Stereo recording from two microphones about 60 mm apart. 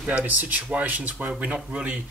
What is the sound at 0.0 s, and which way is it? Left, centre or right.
Speech, right.